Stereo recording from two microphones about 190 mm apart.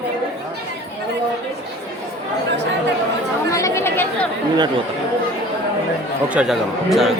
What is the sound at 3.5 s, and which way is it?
Speech, 15° left (ahead or behind).